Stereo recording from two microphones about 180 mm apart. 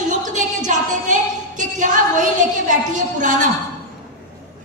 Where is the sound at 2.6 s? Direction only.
45° right (ahead or behind).